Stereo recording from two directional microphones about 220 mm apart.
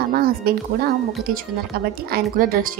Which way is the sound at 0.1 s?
45° right (ahead or behind).